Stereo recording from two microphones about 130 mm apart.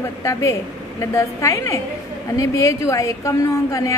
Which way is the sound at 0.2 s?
25° left (ahead or behind).